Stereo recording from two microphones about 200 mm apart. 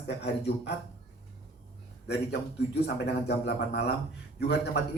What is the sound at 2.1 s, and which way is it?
A man's voice, 55° left (ahead or behind).